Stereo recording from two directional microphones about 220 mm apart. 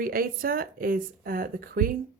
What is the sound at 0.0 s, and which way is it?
Speech, 40° right (ahead or behind).